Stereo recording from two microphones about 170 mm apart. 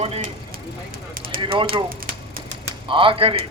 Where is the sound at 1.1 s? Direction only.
55° right (ahead or behind).